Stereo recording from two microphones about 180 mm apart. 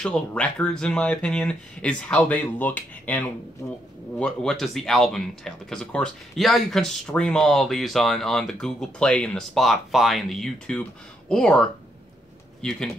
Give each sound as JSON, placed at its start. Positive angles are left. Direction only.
{"t": 0.0, "sound": "speech", "side_deg": 5}